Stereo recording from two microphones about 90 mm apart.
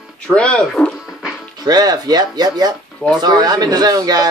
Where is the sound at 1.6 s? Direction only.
45° right (ahead or behind).